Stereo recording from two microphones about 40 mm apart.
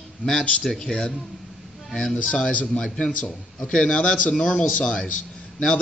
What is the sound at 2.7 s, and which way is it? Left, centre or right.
A man's voice, left.